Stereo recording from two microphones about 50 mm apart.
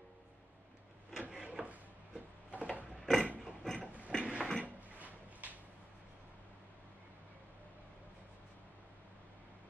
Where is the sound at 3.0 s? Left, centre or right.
Centre.